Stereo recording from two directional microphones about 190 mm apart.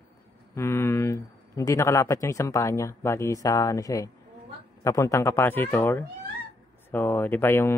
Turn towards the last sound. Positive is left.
turn(degrees=10)  # may be behind; listen again after turning